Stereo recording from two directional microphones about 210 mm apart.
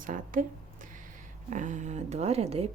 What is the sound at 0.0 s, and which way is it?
A woman's voice, 40° right (ahead or behind).